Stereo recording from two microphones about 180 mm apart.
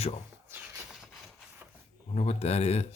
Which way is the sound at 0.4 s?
10° right (ahead or behind).